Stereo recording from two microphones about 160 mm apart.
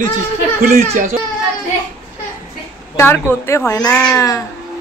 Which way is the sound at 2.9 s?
15° left (ahead or behind).